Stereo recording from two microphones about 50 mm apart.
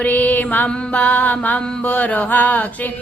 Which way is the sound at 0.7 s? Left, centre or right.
Left.